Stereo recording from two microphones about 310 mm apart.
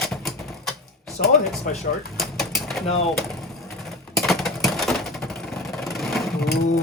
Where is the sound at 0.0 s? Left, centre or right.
Centre.